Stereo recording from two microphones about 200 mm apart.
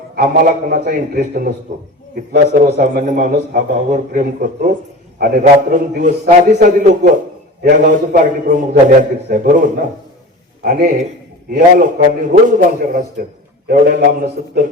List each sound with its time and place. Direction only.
0.2 s a man's voice: 45° right (ahead or behind)